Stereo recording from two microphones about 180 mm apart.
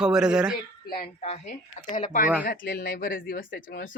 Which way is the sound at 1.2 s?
35° left (ahead or behind).